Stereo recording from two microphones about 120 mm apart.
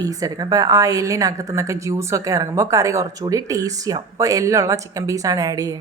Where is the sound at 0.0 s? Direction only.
30° right (ahead or behind).